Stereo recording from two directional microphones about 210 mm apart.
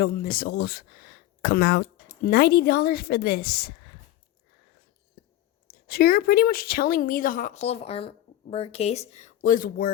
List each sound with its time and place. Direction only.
0.0 s speech: 45° left (ahead or behind)
5.2 s whispering: 50° left (ahead or behind)
5.6 s a woman's voice: 45° left (ahead or behind)